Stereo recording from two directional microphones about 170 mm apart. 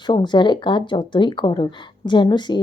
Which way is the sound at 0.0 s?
25° left (ahead or behind).